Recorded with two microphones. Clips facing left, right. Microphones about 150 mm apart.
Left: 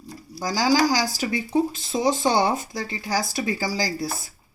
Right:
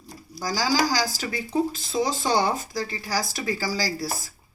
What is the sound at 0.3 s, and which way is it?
Speech, 20° left (ahead or behind).